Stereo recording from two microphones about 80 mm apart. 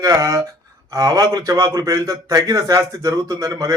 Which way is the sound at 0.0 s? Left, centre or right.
Right.